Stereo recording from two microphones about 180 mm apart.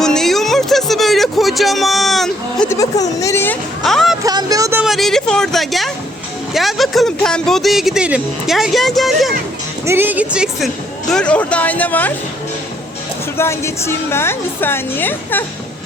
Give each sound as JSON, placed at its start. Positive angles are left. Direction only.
{"t": 0.0, "sound": "music", "side_deg": 0}
{"t": 2.6, "sound": "a woman's voice", "side_deg": 20}
{"t": 4.2, "sound": "a sound", "side_deg": -20}
{"t": 4.8, "sound": "a sound", "side_deg": 0}
{"t": 6.5, "sound": "speech", "side_deg": 0}
{"t": 9.8, "sound": "speech", "side_deg": -15}
{"t": 11.1, "sound": "a woman's voice", "side_deg": 5}
{"t": 13.3, "sound": "a woman's voice", "side_deg": 15}